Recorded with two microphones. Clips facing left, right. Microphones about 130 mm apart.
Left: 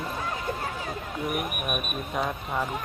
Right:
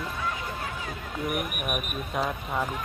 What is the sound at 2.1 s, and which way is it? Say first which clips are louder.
Speech: even; centre (ahead or behind).